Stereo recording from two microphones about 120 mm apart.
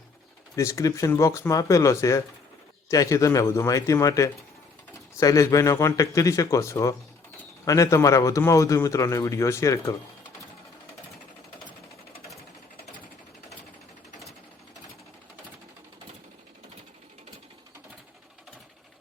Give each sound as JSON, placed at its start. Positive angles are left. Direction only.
{"t": 0.5, "sound": "a man's voice", "side_deg": 25}